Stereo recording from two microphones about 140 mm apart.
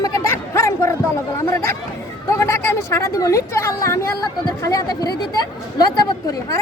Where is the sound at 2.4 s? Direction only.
20° left (ahead or behind).